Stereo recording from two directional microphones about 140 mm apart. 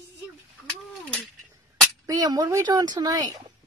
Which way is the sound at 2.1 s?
25° right (ahead or behind).